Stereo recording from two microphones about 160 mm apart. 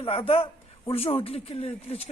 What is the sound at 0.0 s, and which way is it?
A man's voice, 35° left (ahead or behind).